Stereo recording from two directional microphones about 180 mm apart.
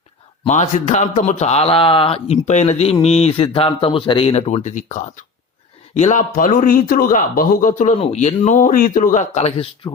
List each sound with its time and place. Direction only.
0.4 s a man's voice: 40° left (ahead or behind)